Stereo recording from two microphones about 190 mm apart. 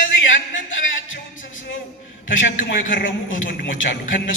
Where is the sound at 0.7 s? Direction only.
90° left.